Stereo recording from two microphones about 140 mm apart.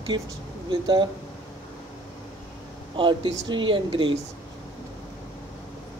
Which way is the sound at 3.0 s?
35° right (ahead or behind).